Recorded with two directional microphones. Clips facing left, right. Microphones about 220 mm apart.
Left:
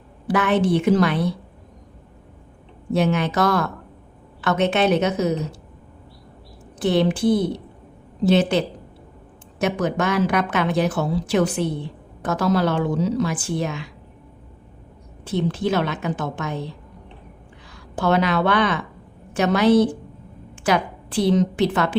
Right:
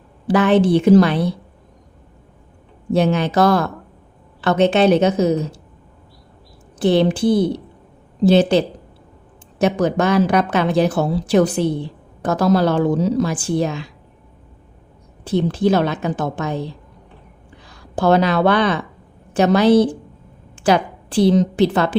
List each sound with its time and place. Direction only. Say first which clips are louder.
0.3 s a woman's voice: right 5 dB; 30° right (ahead or behind)
2.9 s a woman's voice: right 4 dB; 35° right (ahead or behind)
6.8 s a woman's voice: right 3 dB; 30° right (ahead or behind)
15.2 s a woman's voice: right 5 dB; 35° right (ahead or behind)
17.7 s a woman's voice: right 5 dB; 35° right (ahead or behind)